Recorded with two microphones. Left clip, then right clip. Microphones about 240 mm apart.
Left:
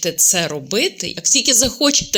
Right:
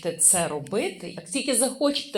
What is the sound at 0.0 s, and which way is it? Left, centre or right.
Speech, left.